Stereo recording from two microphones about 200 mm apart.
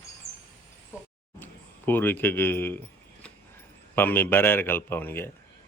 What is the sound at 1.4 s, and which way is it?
Speech, 10° left (ahead or behind).